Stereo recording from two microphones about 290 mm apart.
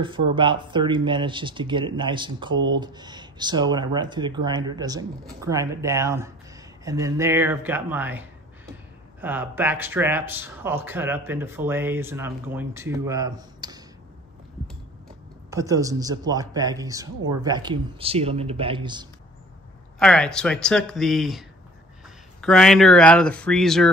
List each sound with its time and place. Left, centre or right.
0.3 s speech: centre
15.5 s speech: centre
20.0 s speech: centre